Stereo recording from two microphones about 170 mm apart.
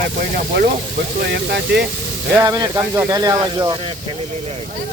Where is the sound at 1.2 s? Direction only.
75° right (ahead or behind).